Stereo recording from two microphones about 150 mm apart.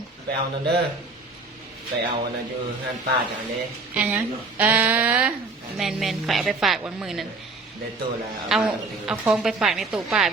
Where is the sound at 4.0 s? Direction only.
10° right (ahead or behind).